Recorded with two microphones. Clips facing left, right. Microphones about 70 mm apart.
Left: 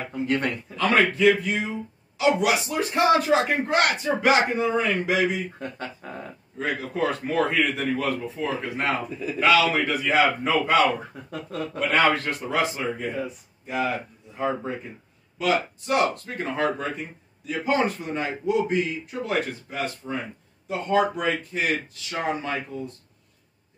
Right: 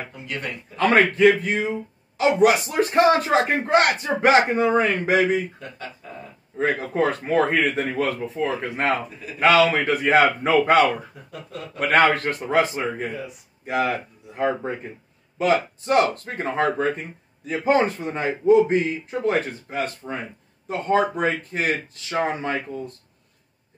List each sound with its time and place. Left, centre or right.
0.7 s a man's voice: right
5.6 s speech: left
6.6 s a man's voice: right
11.9 s a man's voice: right
13.7 s speech: right
15.3 s a man's voice: right
22.1 s a man's voice: right